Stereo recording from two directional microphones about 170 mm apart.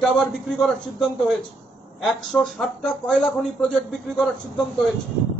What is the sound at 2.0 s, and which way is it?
A man's voice, 5° left (ahead or behind).